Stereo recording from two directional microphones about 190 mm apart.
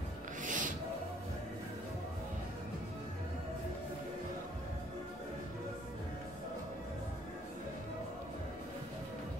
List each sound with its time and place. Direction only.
0.4 s filing: 40° right (ahead or behind)